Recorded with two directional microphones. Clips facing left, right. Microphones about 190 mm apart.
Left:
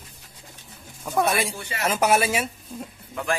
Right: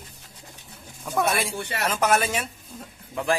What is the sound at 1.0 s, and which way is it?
Speech, centre (ahead or behind).